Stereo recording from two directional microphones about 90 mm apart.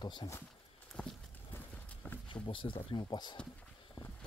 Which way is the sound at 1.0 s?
10° left (ahead or behind).